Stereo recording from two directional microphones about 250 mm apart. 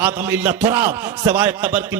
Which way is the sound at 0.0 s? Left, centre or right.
Centre.